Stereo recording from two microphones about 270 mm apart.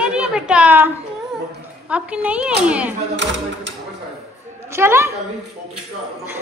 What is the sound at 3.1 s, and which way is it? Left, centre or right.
Speech, right.